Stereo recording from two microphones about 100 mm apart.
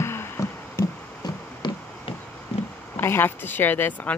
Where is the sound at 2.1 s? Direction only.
65° left (ahead or behind).